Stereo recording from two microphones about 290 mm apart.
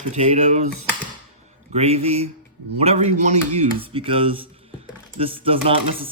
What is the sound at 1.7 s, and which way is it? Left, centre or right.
Speech, right.